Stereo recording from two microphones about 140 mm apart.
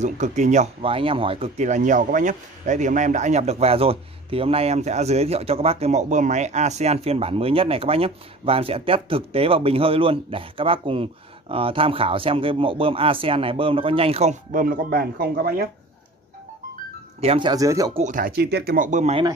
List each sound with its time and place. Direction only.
0.0 s speech: 60° right (ahead or behind)
0.8 s speech: 40° right (ahead or behind)
1.6 s speech: 60° right (ahead or behind); by 14.3 s 45° right (ahead or behind)
14.5 s speech: 85° right
17.2 s speech: 45° right (ahead or behind)
17.5 s speech: 25° right (ahead or behind)
17.9 s speech: 65° right (ahead or behind)